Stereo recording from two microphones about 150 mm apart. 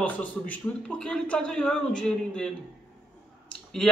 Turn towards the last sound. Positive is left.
turn(degrees=5)  # may be behind; listen again after turning